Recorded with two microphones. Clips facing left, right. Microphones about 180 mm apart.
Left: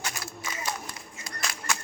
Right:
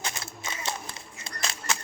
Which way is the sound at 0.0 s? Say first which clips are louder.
Even; 25° right (ahead or behind).